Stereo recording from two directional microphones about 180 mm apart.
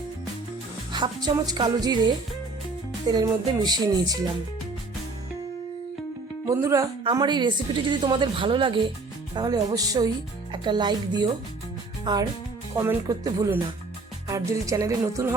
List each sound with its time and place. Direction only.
0.9 s a woman's voice: 25° right (ahead or behind)
6.4 s a woman's voice: 15° right (ahead or behind)
12.7 s music: 15° right (ahead or behind)